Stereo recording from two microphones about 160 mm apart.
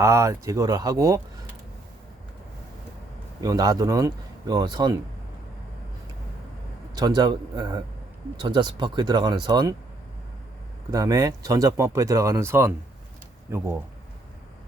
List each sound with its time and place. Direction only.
0.0 s speech: 20° right (ahead or behind)
3.4 s speech: 25° right (ahead or behind)
6.9 s speech: 25° right (ahead or behind)
10.9 s speech: 20° right (ahead or behind)